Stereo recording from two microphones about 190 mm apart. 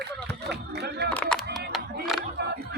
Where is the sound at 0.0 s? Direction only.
60° right (ahead or behind).